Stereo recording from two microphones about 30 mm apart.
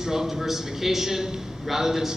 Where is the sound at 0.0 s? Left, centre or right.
Centre.